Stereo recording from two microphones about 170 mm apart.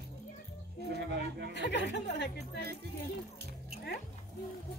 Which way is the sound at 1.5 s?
90° left.